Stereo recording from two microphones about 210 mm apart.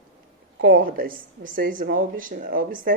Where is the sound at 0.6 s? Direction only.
45° right (ahead or behind).